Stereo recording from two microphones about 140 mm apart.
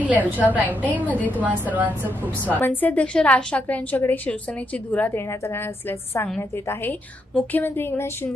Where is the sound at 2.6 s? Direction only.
15° left (ahead or behind).